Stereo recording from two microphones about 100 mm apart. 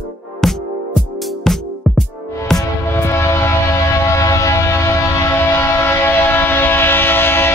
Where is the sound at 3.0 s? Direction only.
25° left (ahead or behind).